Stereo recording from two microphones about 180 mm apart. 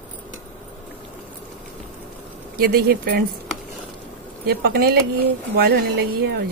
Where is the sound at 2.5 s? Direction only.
60° right (ahead or behind).